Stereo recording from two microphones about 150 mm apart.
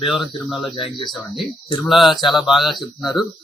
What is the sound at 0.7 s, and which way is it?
Speech, 35° left (ahead or behind).